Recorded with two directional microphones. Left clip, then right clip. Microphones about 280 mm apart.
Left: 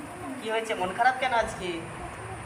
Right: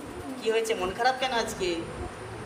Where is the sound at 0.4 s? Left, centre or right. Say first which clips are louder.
Right 2 dB; centre.